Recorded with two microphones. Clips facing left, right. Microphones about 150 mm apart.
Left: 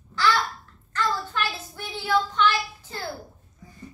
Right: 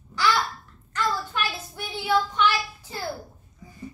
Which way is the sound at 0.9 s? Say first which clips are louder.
Even; 15° right (ahead or behind).